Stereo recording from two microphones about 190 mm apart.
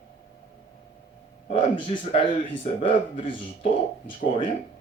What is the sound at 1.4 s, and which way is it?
A man's voice, 30° left (ahead or behind).